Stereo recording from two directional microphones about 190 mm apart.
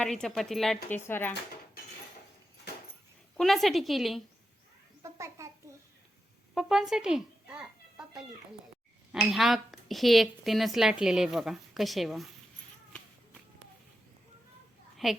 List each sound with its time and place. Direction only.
0.0 s speech: 5° left (ahead or behind)
3.3 s speech: centre (ahead or behind)
5.0 s babbling: 15° right (ahead or behind)
6.5 s a child's voice: centre (ahead or behind)
15.0 s speech: centre (ahead or behind)